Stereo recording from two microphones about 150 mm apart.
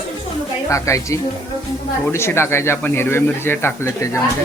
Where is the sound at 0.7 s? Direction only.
20° left (ahead or behind).